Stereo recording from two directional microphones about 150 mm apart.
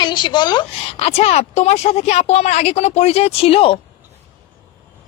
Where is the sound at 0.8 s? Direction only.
40° left (ahead or behind).